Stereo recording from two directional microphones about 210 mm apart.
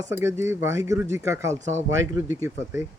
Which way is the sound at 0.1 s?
10° right (ahead or behind).